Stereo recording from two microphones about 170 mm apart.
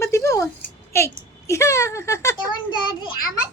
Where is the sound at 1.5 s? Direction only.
15° left (ahead or behind).